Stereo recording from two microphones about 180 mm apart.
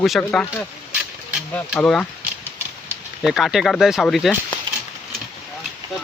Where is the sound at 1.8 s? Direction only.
10° left (ahead or behind).